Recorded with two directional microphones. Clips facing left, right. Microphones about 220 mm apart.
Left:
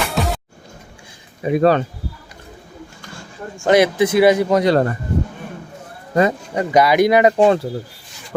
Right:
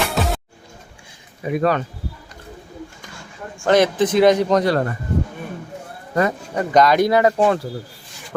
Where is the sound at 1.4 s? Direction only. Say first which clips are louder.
Left 5 dB; 25° left (ahead or behind).